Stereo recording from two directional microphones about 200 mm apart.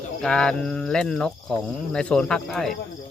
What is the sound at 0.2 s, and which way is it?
Speech, 5° left (ahead or behind).